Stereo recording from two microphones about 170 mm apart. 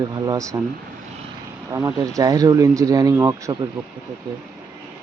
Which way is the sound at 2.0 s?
20° right (ahead or behind).